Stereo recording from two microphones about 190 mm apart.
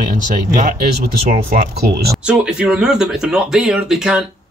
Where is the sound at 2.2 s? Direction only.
5° right (ahead or behind).